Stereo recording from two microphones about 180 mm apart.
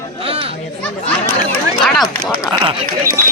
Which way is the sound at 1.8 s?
Centre (ahead or behind).